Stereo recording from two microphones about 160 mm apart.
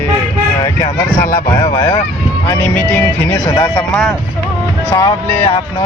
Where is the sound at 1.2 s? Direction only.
60° left (ahead or behind).